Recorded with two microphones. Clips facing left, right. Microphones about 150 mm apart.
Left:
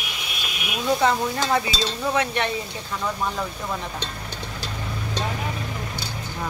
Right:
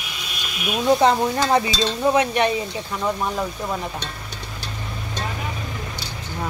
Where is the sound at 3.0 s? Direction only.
15° right (ahead or behind).